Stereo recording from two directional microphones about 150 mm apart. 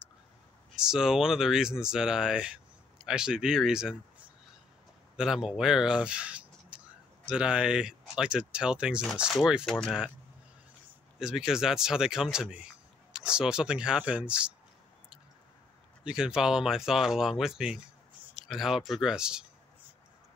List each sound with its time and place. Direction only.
0.7 s speech: 5° right (ahead or behind)
5.1 s speech: 5° right (ahead or behind)
11.1 s speech: 5° right (ahead or behind)
16.0 s speech: 5° right (ahead or behind)